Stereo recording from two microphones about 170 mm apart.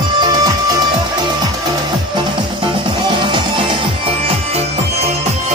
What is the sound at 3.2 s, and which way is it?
Music, 30° right (ahead or behind).